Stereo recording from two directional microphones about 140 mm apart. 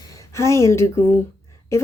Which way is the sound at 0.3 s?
20° left (ahead or behind).